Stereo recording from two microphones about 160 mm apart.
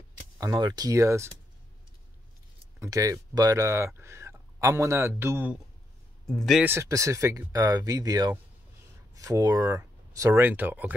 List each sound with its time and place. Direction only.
0.4 s speech: 25° right (ahead or behind)
2.8 s speech: 20° right (ahead or behind)
6.2 s speech: centre (ahead or behind)
6.6 s speech: 15° right (ahead or behind)